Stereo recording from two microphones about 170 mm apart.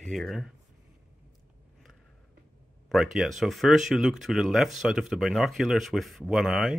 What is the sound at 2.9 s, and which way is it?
Speech, centre (ahead or behind).